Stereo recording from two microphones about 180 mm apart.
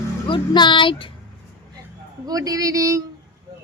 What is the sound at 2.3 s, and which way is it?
Speech, 20° right (ahead or behind).